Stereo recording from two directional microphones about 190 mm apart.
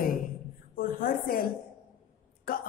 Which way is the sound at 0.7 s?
50° left (ahead or behind).